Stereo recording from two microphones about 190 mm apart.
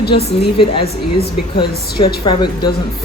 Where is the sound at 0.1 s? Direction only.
35° left (ahead or behind).